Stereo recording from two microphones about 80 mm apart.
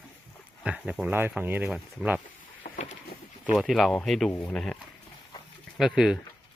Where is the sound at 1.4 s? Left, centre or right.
Right.